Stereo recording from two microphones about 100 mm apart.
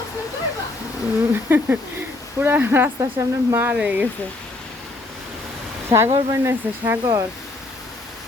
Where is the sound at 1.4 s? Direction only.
20° right (ahead or behind).